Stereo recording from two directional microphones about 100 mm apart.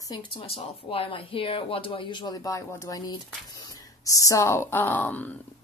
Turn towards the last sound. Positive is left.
turn(degrees=15)  # may be behind; listen again after turning